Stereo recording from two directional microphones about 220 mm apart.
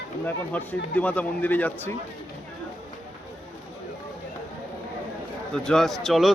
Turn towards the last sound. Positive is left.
turn(degrees=0)  # may be behind; listen again after turning